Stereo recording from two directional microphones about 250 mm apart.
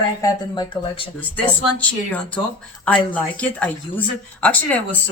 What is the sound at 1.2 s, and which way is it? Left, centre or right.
Speech, centre.